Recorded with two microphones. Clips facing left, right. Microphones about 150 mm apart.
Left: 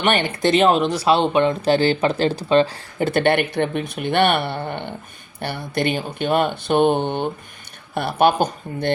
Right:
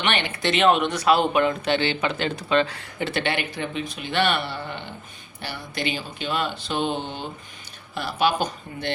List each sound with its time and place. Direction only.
0.0 s speech: 45° left (ahead or behind)